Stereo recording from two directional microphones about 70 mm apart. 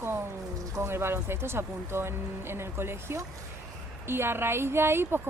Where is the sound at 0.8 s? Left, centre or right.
Right.